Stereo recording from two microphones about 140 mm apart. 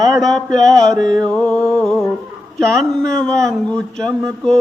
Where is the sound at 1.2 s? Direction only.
10° left (ahead or behind).